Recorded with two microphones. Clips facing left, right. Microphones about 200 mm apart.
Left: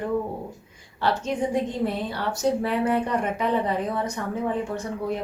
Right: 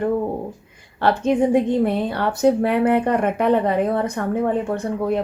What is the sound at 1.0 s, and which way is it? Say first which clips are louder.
A woman's voice: right 7 dB; 55° right (ahead or behind).